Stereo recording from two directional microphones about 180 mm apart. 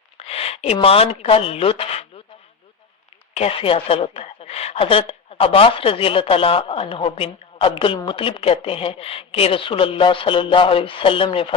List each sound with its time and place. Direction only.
0.2 s speech: 35° left (ahead or behind)
3.3 s a woman's voice: 30° left (ahead or behind)